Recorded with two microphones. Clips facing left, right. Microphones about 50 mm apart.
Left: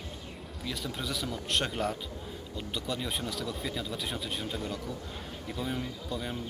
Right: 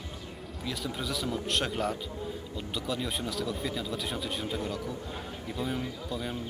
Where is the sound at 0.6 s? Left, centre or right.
Centre.